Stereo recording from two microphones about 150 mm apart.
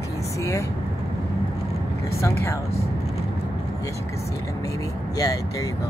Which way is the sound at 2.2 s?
20° left (ahead or behind).